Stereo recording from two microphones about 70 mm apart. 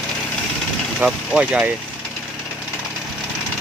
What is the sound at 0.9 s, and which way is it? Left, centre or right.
Speech, centre.